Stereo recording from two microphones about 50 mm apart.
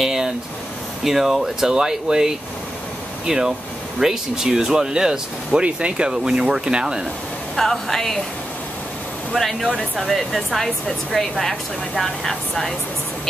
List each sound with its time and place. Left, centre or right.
0.0 s a sound: centre
1.0 s speech: centre
7.5 s speech: centre
9.3 s speech: centre
9.8 s speech: centre
10.1 s speech: centre